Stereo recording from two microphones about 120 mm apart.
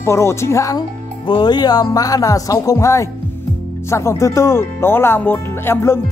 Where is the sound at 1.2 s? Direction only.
40° left (ahead or behind).